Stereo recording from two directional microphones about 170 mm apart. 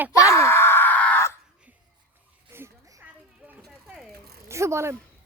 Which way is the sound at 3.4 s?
5° right (ahead or behind).